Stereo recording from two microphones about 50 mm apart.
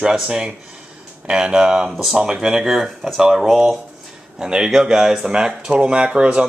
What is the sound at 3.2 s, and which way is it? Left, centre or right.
Speech, centre.